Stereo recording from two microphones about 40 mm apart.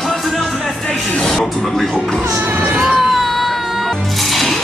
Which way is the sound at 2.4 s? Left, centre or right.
Right.